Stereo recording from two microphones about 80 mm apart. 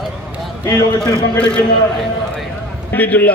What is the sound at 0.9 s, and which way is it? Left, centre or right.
Speech, centre.